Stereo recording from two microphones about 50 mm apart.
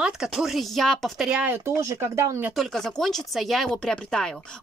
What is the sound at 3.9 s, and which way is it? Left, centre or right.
Speech, centre.